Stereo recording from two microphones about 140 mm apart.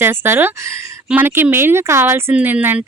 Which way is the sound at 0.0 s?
15° right (ahead or behind).